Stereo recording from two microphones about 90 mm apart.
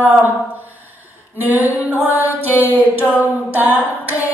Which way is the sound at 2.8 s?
20° right (ahead or behind).